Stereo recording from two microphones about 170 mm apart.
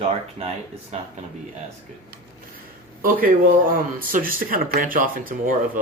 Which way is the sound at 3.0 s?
55° right (ahead or behind).